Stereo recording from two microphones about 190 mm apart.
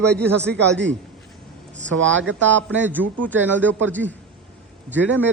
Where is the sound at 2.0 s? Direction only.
80° right.